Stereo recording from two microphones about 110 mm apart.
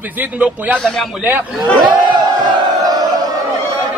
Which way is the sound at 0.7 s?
5° left (ahead or behind).